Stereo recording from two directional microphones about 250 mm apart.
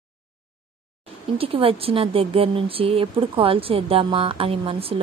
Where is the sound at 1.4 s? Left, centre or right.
Right.